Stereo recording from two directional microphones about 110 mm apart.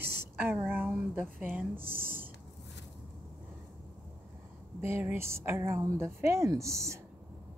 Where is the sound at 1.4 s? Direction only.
15° right (ahead or behind).